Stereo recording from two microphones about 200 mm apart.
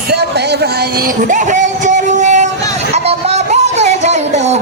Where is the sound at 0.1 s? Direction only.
55° right (ahead or behind).